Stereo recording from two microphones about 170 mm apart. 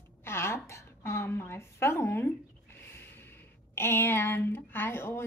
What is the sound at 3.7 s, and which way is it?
Child singing, 15° left (ahead or behind).